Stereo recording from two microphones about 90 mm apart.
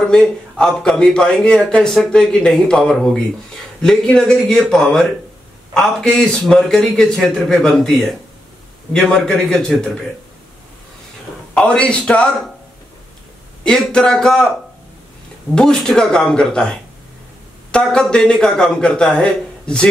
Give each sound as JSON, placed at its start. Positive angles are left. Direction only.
{"t": 0.0, "sound": "a man's voice", "side_deg": 10}
{"t": 11.5, "sound": "a man's voice", "side_deg": 10}
{"t": 13.7, "sound": "a man's voice", "side_deg": 10}
{"t": 15.5, "sound": "a man's voice", "side_deg": 5}
{"t": 17.6, "sound": "a man's voice", "side_deg": 10}